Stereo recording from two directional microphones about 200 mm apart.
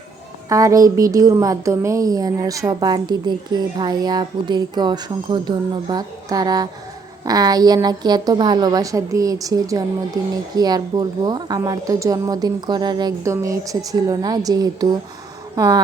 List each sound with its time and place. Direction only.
0.4 s a woman's voice: 15° right (ahead or behind)